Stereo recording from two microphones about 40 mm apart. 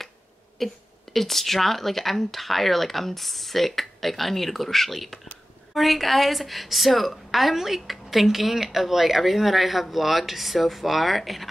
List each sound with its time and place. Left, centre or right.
0.6 s a woman's voice: centre